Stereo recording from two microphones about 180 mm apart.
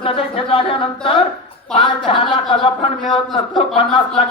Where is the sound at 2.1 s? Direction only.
30° left (ahead or behind).